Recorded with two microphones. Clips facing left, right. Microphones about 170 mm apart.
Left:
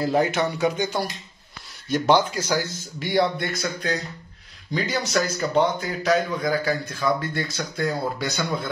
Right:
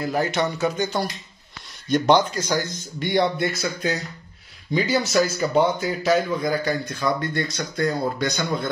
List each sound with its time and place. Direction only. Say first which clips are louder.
0.0 s speech: left 3 dB; 25° left (ahead or behind)
0.3 s speech: even; 10° left (ahead or behind)